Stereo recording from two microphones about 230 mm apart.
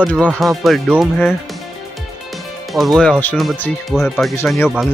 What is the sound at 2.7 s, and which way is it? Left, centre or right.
Speech, centre.